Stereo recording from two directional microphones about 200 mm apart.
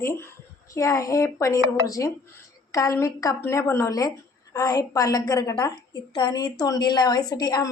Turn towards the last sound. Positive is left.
turn(degrees=20)  # may be behind; listen again after turning